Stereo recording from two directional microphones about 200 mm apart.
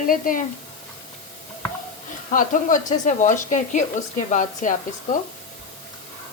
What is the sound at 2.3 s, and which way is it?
Speech, 40° left (ahead or behind).